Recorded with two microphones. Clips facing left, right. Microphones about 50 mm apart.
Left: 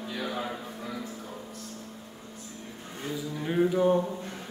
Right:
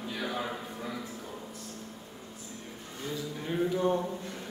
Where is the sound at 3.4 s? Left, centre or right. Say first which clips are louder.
Left 5 dB; centre.